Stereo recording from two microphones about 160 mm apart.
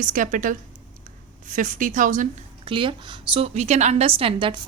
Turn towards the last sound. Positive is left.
turn(degrees=-35)  # may be behind; listen again after turning